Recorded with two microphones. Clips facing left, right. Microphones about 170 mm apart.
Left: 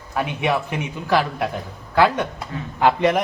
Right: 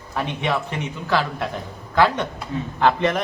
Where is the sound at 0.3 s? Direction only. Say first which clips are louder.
Left 1 dB; 10° left (ahead or behind).